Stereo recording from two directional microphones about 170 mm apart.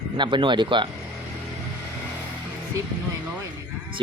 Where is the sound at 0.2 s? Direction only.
30° right (ahead or behind).